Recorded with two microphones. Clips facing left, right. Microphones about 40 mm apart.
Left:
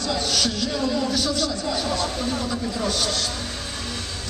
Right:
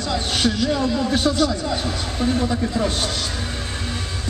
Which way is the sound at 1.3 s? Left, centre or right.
Centre.